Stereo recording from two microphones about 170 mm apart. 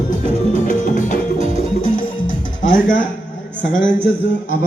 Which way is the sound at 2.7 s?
50° left (ahead or behind).